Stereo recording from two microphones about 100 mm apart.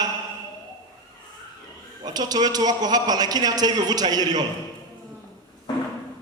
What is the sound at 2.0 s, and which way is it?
A man's voice, 40° right (ahead or behind).